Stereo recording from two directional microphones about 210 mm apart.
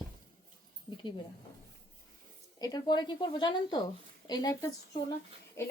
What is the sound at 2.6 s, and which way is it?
A woman's voice, 20° left (ahead or behind).